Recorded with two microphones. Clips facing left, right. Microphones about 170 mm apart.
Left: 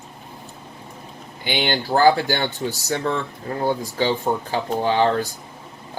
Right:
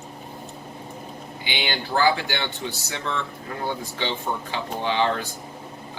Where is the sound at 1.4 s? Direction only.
45° left (ahead or behind).